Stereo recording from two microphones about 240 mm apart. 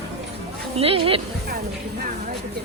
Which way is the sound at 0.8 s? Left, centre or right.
Right.